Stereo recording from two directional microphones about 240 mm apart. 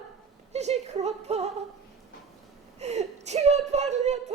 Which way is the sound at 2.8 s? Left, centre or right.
Right.